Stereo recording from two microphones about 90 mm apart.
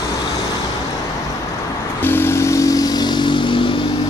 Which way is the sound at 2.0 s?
25° left (ahead or behind).